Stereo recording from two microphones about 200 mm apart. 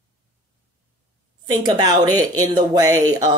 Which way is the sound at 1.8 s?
20° right (ahead or behind).